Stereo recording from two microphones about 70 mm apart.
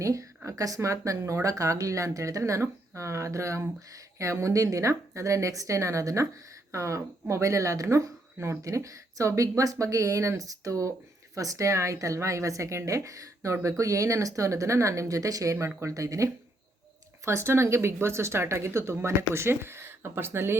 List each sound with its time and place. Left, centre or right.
0.0 s speech: right
17.2 s speech: right